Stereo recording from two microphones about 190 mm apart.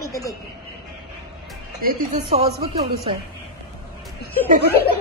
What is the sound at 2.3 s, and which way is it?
Speech, 35° right (ahead or behind).